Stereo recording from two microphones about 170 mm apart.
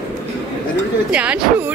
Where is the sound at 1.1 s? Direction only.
10° right (ahead or behind).